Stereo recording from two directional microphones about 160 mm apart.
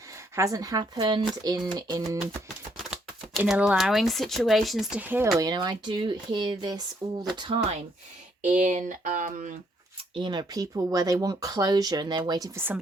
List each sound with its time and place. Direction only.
0.3 s speech: 20° right (ahead or behind)
3.3 s speech: 5° right (ahead or behind)
5.4 s speech: 25° right (ahead or behind)
8.4 s speech: 50° right (ahead or behind)
10.2 s speech: 30° right (ahead or behind)
12.5 s speech: 10° right (ahead or behind)